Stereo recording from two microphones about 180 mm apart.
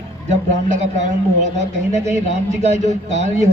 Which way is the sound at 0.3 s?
40° right (ahead or behind).